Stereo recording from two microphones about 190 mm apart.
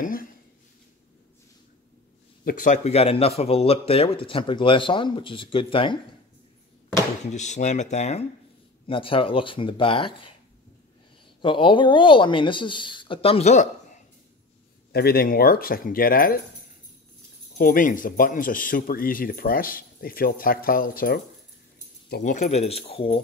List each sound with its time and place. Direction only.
0.0 s a sound: 50° left (ahead or behind)
2.4 s speech: 40° left (ahead or behind)
7.3 s speech: 40° left (ahead or behind)
11.4 s speech: 25° left (ahead or behind)
14.9 s speech: 55° left (ahead or behind)
17.6 s speech: 45° left (ahead or behind)
22.2 s speech: 40° left (ahead or behind)